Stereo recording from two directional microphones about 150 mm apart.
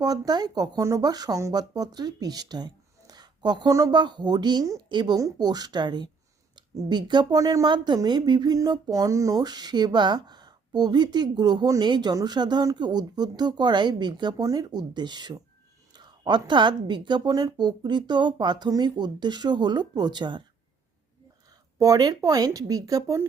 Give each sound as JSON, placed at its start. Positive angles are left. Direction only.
{"t": 0.0, "sound": "speech", "side_deg": -25}
{"t": 21.8, "sound": "speech", "side_deg": -25}